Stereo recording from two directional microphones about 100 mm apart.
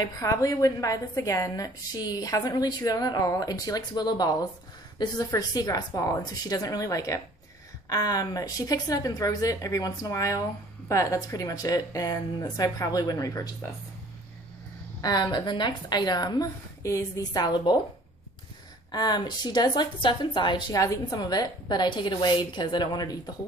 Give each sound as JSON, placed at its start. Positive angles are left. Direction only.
{"t": 0.0, "sound": "speech", "side_deg": 35}
{"t": 15.0, "sound": "a woman's voice", "side_deg": 40}
{"t": 16.8, "sound": "speech", "side_deg": 35}
{"t": 18.9, "sound": "a woman's voice", "side_deg": 45}
{"t": 20.7, "sound": "a woman's voice", "side_deg": 35}